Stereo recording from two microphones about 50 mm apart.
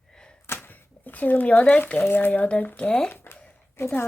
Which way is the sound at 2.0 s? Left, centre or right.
Left.